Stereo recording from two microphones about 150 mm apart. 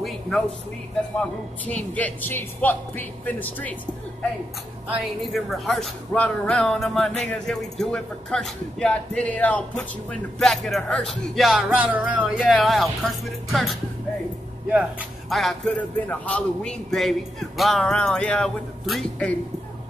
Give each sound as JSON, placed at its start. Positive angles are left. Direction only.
{"t": 1.7, "sound": "speech", "side_deg": 10}
{"t": 4.9, "sound": "speech", "side_deg": 0}
{"t": 12.4, "sound": "speech", "side_deg": 0}
{"t": 14.7, "sound": "speech", "side_deg": -10}
{"t": 15.2, "sound": "speech", "side_deg": 0}